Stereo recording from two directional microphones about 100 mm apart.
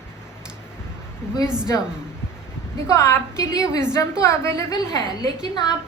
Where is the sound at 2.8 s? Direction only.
30° left (ahead or behind).